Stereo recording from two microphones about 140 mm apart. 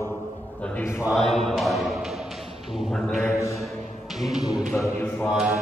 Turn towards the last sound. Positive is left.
turn(degrees=-5)  # may be behind; listen again after turning